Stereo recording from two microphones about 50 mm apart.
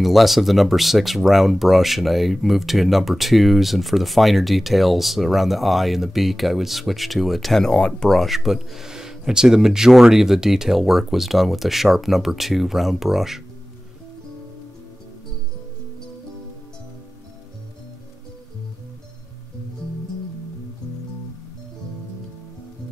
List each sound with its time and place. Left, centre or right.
0.0 s speech: centre
7.6 s speech: centre
8.2 s speech: centre